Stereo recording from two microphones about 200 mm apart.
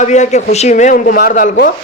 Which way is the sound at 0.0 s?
35° left (ahead or behind).